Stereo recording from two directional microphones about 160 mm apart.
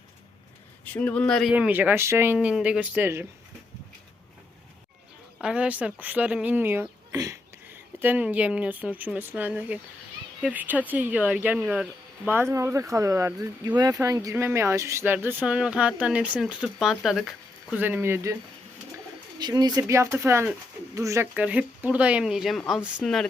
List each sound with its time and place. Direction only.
0.9 s speech: 10° left (ahead or behind)
1.5 s speech: 10° right (ahead or behind)
5.4 s speech: 5° right (ahead or behind)
17.7 s speech: 10° right (ahead or behind)
19.4 s speech: 25° right (ahead or behind); by 23.3 s 5° left (ahead or behind)